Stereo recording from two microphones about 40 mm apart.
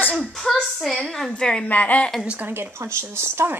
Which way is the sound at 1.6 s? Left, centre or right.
Left.